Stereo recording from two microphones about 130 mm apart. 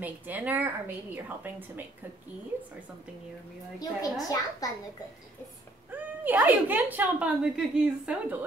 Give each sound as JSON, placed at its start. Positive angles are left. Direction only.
{"t": 0.0, "sound": "a woman's voice", "side_deg": -10}
{"t": 3.8, "sound": "a woman's voice", "side_deg": 25}
{"t": 5.9, "sound": "a woman's voice", "side_deg": -15}